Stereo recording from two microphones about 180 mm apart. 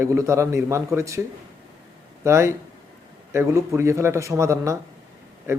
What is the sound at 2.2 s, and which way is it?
Speech, 15° right (ahead or behind).